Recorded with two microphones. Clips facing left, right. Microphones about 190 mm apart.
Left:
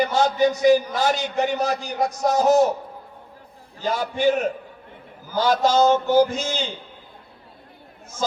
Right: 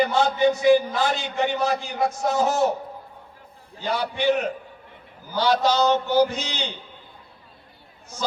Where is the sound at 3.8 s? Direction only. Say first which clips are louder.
Left 2 dB; 45° left (ahead or behind).